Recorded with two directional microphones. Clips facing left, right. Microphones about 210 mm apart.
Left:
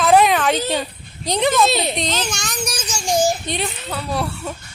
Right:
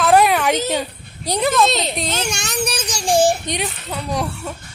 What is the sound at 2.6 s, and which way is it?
Child singing, 60° right (ahead or behind).